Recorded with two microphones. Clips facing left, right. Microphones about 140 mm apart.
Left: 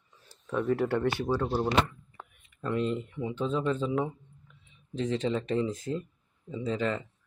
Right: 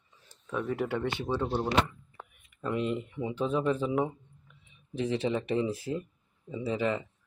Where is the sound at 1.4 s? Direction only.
5° left (ahead or behind).